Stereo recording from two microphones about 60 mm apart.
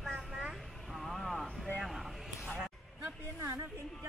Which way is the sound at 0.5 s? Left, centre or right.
Centre.